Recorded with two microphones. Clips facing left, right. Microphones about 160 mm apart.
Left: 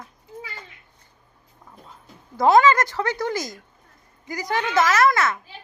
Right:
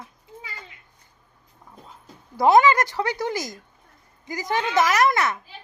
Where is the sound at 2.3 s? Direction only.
15° right (ahead or behind).